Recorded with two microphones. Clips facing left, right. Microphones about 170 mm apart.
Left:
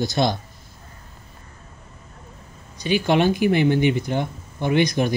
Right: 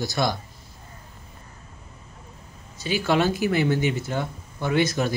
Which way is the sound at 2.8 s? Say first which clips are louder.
Left 3 dB; 20° left (ahead or behind).